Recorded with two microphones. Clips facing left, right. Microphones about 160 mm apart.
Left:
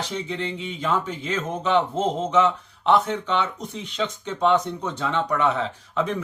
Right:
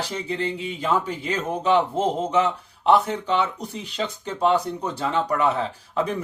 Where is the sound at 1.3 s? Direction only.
40° right (ahead or behind).